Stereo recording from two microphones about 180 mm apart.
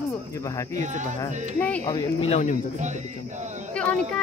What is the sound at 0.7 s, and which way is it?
Speech, 40° right (ahead or behind).